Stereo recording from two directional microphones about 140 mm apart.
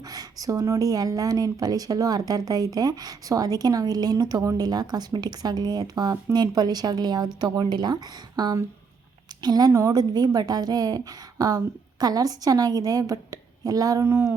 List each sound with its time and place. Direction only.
0.1 s speech: 25° right (ahead or behind)